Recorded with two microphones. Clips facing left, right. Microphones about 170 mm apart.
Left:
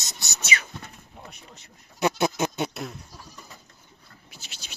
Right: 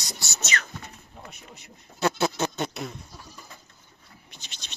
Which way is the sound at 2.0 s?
15° left (ahead or behind).